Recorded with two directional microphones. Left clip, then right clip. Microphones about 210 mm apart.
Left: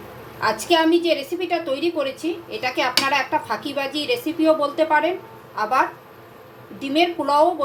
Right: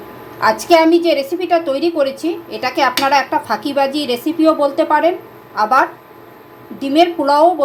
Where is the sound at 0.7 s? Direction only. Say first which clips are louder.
Right 6 dB; 25° right (ahead or behind).